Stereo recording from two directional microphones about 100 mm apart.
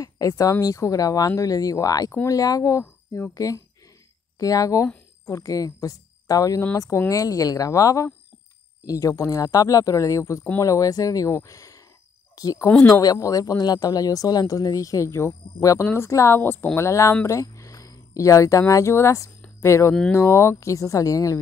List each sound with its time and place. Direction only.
0.0 s a woman's voice: 35° left (ahead or behind)
19.9 s speech: 20° left (ahead or behind); by 21.4 s 35° left (ahead or behind)